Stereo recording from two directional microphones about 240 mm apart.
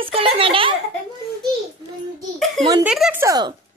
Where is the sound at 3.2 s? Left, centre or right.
Centre.